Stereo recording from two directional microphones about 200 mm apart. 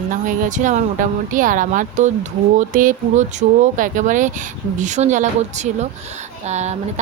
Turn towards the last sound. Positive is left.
turn(degrees=-35)  # may be behind; listen again after turning